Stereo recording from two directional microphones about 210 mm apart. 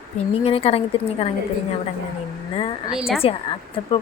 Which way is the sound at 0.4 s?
25° left (ahead or behind).